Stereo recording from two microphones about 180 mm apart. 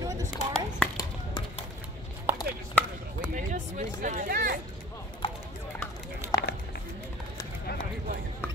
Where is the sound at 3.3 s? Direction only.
45° right (ahead or behind).